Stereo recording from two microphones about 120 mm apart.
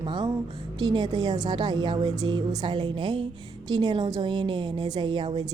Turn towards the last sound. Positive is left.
turn(degrees=-45)  # may be behind; listen again after turning